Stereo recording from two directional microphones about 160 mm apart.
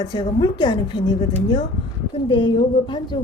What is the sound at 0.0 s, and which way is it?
A woman's voice, 30° left (ahead or behind).